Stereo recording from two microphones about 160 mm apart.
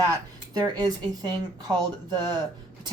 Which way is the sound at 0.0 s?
25° right (ahead or behind).